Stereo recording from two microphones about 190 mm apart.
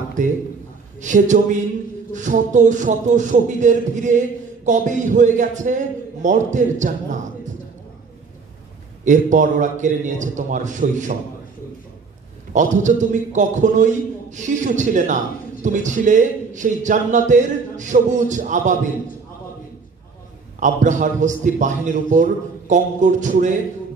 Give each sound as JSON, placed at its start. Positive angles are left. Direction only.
{"t": 0.2, "sound": "a man's voice", "side_deg": -40}
{"t": 9.0, "sound": "a man's voice", "side_deg": -40}
{"t": 12.5, "sound": "a man's voice", "side_deg": -40}
{"t": 20.5, "sound": "a man's voice", "side_deg": -40}